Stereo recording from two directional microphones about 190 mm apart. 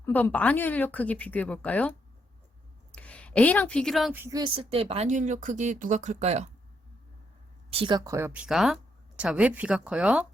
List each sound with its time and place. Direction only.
0.0 s a woman's voice: 10° left (ahead or behind)
4.2 s speech: 20° right (ahead or behind); by 6.5 s 35° right (ahead or behind)
7.7 s speech: 25° right (ahead or behind); by 10.2 s 5° right (ahead or behind)